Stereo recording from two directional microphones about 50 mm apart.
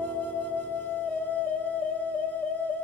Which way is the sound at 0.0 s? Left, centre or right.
Left.